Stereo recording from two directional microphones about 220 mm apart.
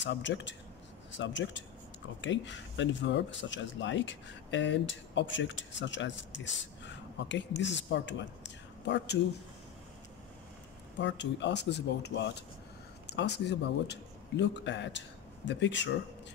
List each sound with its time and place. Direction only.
0.0 s speech: 55° left (ahead or behind)
11.0 s speech: 55° left (ahead or behind)